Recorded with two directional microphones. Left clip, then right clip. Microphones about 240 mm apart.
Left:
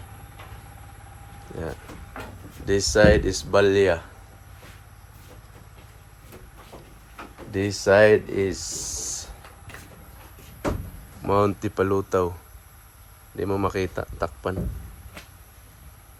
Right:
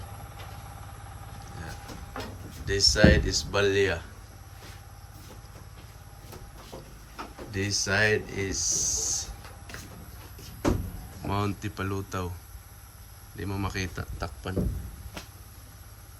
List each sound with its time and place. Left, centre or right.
2.6 s speech: centre
7.5 s speech: centre
11.3 s speech: centre
13.3 s speech: centre